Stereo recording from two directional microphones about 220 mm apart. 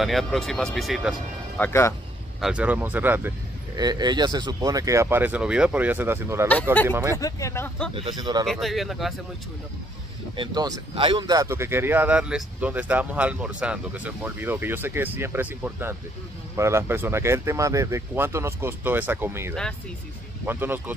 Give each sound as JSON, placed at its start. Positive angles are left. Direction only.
{"t": 0.0, "sound": "speech", "side_deg": 0}
{"t": 1.6, "sound": "speech", "side_deg": 10}
{"t": 2.4, "sound": "speech", "side_deg": -5}
{"t": 7.2, "sound": "speech", "side_deg": 15}
{"t": 7.9, "sound": "speech", "side_deg": -20}
{"t": 8.5, "sound": "speech", "side_deg": 0}
{"t": 10.3, "sound": "speech", "side_deg": -20}